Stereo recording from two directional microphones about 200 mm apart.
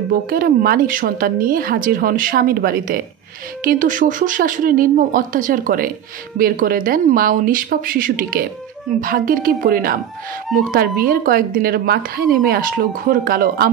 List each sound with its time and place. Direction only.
0.1 s a woman's voice: 45° right (ahead or behind)